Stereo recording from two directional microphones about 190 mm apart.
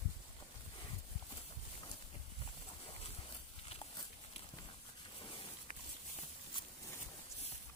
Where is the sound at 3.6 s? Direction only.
25° left (ahead or behind).